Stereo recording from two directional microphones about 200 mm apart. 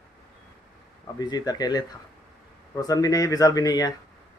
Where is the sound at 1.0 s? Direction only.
20° left (ahead or behind).